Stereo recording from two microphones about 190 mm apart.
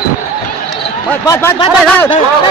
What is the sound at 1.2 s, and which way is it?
Speech, 20° left (ahead or behind).